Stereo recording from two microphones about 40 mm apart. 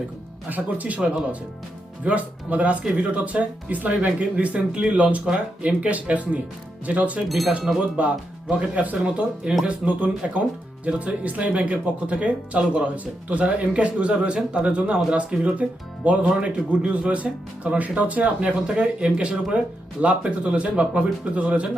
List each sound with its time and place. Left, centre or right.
0.5 s speech: right
2.0 s speech: right
7.3 s speech: centre
7.9 s speech: right